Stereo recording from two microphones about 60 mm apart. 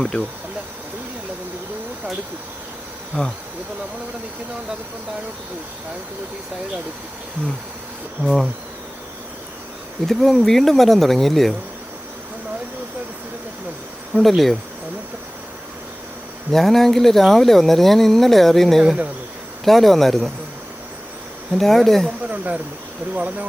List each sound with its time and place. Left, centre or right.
0.0 s speech: centre
8.2 s speech: centre
10.1 s speech: centre
14.1 s speech: centre
16.5 s speech: centre
21.5 s speech: centre
22.2 s speech: right